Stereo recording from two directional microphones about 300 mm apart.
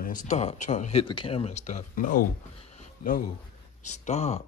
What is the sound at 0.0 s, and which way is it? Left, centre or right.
Speech, left.